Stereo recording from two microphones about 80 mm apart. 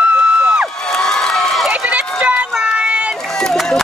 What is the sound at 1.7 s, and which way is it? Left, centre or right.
Run, centre.